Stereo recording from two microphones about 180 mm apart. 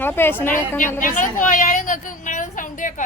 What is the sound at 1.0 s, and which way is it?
A woman's voice, 45° left (ahead or behind).